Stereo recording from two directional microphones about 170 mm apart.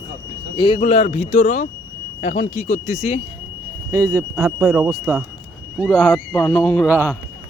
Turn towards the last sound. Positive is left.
turn(degrees=-10)  # may be behind; listen again after turning